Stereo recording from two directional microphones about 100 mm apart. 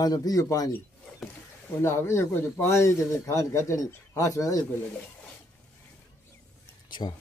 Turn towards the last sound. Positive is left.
turn(degrees=50)  # may be behind; listen again after turning